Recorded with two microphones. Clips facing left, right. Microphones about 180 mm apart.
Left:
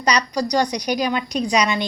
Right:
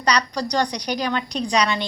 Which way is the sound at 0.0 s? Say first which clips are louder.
Left 2 dB; 10° left (ahead or behind).